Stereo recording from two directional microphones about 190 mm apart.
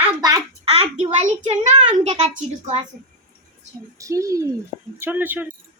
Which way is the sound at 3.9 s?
15° right (ahead or behind).